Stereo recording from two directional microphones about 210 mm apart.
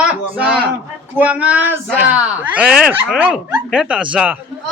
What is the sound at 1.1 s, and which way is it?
Speech, 5° right (ahead or behind).